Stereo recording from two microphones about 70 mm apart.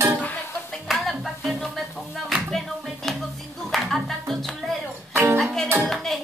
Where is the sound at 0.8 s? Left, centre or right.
Centre.